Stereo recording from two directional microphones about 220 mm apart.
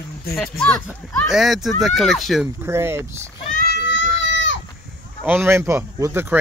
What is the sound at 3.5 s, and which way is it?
Children playing, 50° left (ahead or behind).